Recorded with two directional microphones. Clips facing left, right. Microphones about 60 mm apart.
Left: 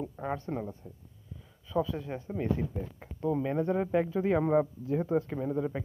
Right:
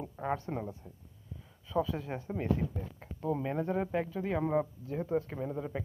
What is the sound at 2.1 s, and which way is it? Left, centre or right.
Speech, centre.